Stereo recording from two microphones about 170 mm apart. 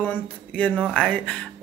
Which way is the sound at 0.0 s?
10° left (ahead or behind).